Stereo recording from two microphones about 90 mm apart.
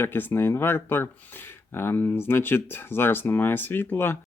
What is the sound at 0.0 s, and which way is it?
Speech, 25° left (ahead or behind).